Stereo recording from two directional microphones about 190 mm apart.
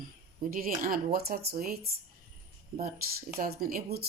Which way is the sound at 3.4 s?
50° right (ahead or behind).